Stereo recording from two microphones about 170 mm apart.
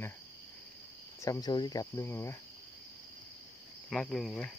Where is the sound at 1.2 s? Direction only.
20° left (ahead or behind).